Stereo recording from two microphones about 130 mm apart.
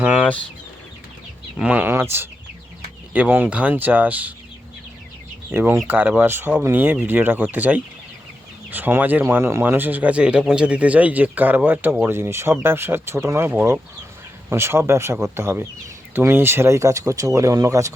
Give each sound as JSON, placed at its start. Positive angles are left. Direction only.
{"t": 0.0, "sound": "chicken", "side_deg": -10}
{"t": 1.5, "sound": "speech", "side_deg": -10}
{"t": 5.5, "sound": "speech", "side_deg": -15}